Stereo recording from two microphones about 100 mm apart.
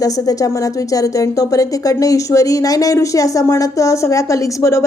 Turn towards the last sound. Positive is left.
turn(degrees=30)  # may be behind; listen again after turning